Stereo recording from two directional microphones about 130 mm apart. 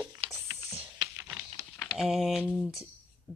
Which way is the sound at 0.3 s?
20° right (ahead or behind).